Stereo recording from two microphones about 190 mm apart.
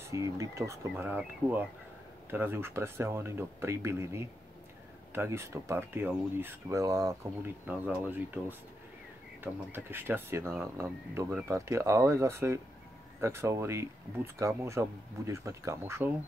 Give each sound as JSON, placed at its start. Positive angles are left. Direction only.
{"t": 0.1, "sound": "speech", "side_deg": -15}